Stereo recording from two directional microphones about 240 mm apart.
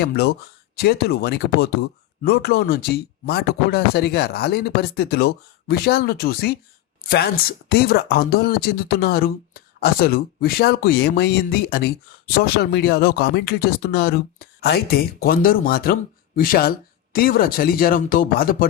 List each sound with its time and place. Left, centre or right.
0.0 s speech: left